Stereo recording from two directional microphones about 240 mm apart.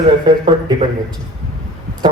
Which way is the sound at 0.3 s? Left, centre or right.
Right.